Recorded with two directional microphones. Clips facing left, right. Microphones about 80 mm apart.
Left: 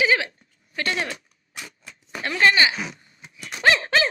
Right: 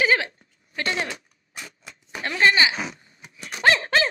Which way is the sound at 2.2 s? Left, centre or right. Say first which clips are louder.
Left 1 dB; right.